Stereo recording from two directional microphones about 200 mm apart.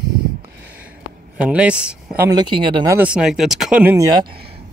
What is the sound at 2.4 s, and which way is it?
Speech, 25° right (ahead or behind).